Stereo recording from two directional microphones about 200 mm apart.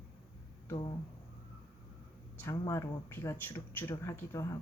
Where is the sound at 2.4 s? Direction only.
15° left (ahead or behind).